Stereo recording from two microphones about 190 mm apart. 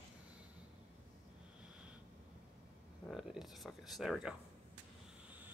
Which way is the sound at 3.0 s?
Centre (ahead or behind).